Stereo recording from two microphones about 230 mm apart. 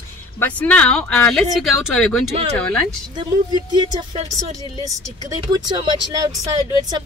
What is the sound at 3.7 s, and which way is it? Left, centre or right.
Speech, centre.